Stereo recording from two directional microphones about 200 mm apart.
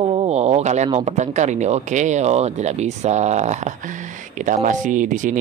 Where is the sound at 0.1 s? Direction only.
30° right (ahead or behind).